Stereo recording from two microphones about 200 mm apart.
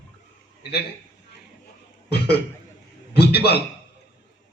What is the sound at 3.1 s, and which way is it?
Speech, 55° left (ahead or behind).